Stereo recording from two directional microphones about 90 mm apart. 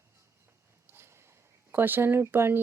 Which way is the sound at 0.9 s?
30° right (ahead or behind).